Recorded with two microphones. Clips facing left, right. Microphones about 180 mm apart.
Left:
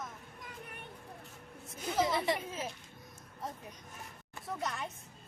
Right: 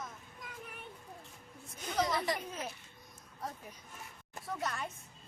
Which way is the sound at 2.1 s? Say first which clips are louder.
Left 2 dB; 25° left (ahead or behind).